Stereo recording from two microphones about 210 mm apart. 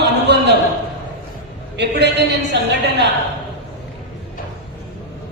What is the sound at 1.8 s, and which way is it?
Speech, 55° right (ahead or behind).